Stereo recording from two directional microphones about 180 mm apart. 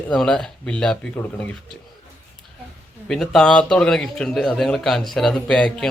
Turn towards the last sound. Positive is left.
turn(degrees=5)  # may be behind; listen again after turning